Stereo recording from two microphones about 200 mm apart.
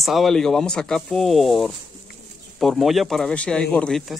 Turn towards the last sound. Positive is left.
turn(degrees=5)  # may be behind; listen again after turning